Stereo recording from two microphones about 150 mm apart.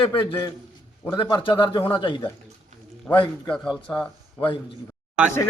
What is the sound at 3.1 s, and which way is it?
Speech, 15° left (ahead or behind).